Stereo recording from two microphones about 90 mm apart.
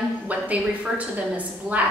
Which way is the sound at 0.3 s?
15° right (ahead or behind).